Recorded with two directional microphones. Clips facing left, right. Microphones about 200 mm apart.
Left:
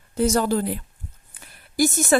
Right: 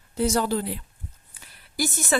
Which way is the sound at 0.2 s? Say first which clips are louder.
Left 3 dB; 45° left (ahead or behind).